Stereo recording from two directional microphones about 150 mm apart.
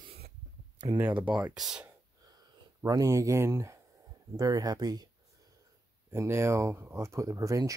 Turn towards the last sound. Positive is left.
turn(degrees=-20)  # may be behind; listen again after turning